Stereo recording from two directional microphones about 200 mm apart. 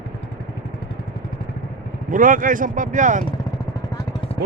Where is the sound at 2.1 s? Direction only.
40° right (ahead or behind).